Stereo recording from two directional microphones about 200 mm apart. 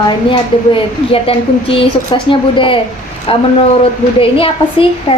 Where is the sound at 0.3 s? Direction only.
25° left (ahead or behind).